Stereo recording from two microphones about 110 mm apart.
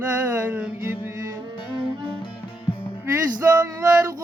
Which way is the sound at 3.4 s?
30° right (ahead or behind).